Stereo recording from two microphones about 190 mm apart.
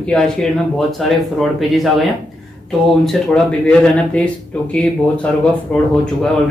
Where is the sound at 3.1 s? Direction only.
5° left (ahead or behind).